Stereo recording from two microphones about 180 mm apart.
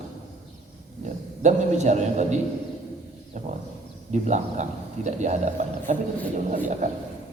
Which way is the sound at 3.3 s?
40° right (ahead or behind).